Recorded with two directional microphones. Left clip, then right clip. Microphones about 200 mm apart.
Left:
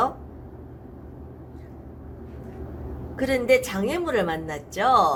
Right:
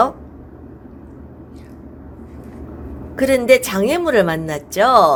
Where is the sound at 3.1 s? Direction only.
55° right (ahead or behind).